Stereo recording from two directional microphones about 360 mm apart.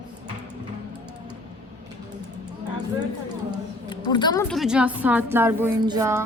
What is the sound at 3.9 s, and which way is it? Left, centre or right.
A woman's voice, centre.